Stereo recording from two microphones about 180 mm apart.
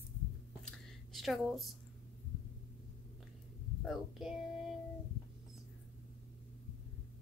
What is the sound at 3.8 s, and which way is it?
Speech, centre (ahead or behind).